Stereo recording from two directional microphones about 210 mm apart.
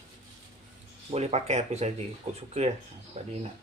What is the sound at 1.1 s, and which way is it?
Speech, 30° right (ahead or behind).